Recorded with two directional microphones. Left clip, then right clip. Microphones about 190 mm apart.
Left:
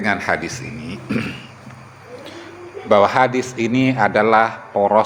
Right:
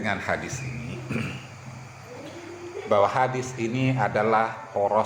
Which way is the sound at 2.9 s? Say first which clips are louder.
Left 8 dB; 50° left (ahead or behind).